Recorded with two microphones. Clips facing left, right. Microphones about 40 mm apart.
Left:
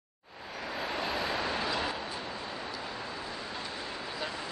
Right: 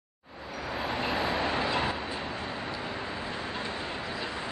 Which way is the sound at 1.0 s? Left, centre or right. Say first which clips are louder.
Right 4 dB; centre.